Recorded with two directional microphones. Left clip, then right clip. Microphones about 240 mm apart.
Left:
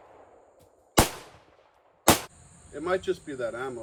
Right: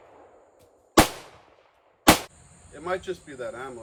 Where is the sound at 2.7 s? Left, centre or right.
Right.